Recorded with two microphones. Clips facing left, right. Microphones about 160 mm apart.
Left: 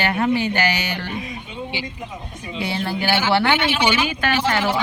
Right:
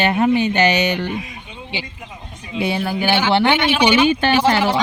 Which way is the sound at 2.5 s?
15° right (ahead or behind).